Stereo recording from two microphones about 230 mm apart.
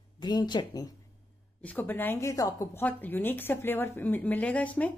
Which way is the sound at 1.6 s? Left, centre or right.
Centre.